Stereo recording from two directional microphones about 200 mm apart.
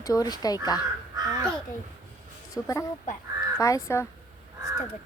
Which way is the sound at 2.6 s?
10° left (ahead or behind).